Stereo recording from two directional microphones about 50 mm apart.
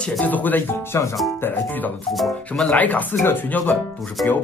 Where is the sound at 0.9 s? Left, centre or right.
Left.